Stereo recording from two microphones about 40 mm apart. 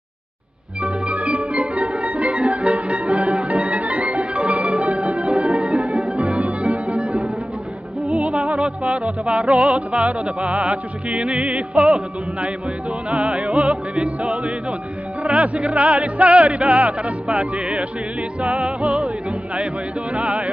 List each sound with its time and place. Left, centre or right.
0.8 s music: right